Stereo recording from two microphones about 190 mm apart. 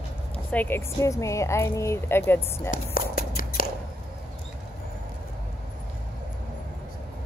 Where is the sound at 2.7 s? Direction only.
45° left (ahead or behind).